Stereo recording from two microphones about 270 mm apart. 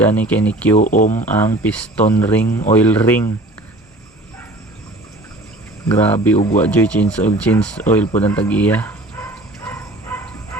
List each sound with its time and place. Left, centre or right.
0.0 s speech: centre
0.8 s speech: left
1.1 s speech: centre
5.9 s speech: centre
8.1 s a sound: centre